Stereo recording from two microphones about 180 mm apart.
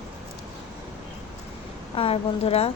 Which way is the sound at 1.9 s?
30° left (ahead or behind).